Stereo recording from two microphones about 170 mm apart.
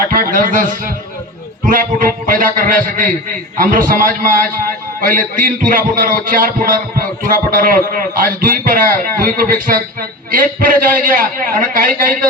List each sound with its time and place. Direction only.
0.1 s a man's voice: 55° right (ahead or behind)